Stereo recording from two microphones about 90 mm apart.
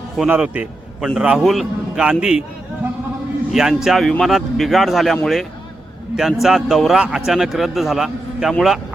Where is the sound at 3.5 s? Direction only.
5° right (ahead or behind).